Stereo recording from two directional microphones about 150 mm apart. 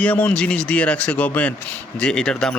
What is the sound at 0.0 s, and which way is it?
Speech, 10° left (ahead or behind).